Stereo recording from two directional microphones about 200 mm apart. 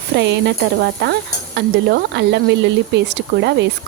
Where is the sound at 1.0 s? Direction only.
55° right (ahead or behind).